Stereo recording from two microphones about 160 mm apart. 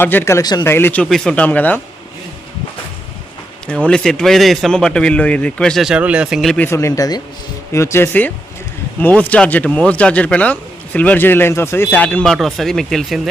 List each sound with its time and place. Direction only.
0.0 s speech: 15° left (ahead or behind)
1.1 s speech: 5° left (ahead or behind)
3.8 s a man's voice: 5° left (ahead or behind)
6.7 s speech: 20° left (ahead or behind); by 13.2 s centre (ahead or behind)